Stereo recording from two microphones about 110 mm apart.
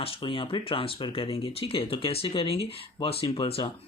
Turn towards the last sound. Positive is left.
turn(degrees=60)  # may be behind; listen again after turning